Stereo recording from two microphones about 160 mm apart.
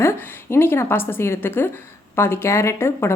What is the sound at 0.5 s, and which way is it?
Speech, 15° left (ahead or behind).